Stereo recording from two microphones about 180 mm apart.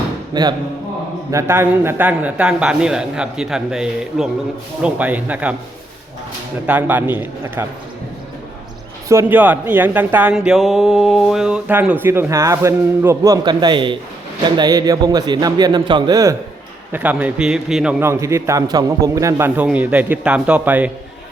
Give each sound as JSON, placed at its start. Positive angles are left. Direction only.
{"t": 0.3, "sound": "a man's voice", "side_deg": -25}
{"t": 6.7, "sound": "a man's voice", "side_deg": -10}
{"t": 9.0, "sound": "a man's voice", "side_deg": -10}
{"t": 16.9, "sound": "a man's voice", "side_deg": -10}
{"t": 18.0, "sound": "a man's voice", "side_deg": -15}